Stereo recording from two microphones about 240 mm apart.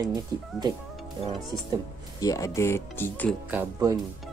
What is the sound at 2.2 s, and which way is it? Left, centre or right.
Speech, centre.